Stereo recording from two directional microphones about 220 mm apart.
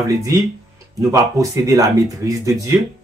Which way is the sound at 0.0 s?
15° right (ahead or behind).